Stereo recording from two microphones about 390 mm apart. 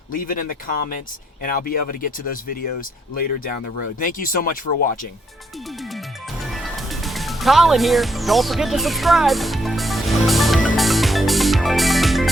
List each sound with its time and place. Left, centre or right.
0.1 s speech: left
4.0 s speech: left
6.4 s music: centre